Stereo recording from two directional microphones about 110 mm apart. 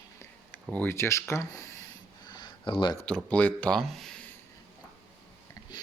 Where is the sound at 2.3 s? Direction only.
45° left (ahead or behind).